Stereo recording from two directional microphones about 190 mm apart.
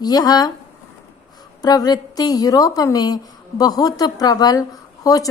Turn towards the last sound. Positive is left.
turn(degrees=20)  # may be behind; listen again after turning